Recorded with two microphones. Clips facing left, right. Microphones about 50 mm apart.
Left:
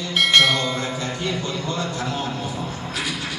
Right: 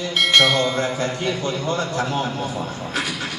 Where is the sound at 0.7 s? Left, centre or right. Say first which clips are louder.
Right 4 dB; right.